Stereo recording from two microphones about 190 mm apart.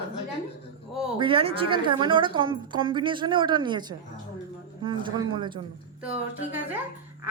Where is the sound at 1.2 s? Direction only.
25° right (ahead or behind).